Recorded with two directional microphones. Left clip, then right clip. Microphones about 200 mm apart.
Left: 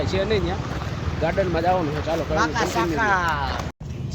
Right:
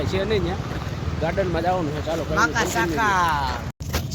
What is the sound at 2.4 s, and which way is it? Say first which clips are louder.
Speech: right 3 dB; 35° right (ahead or behind).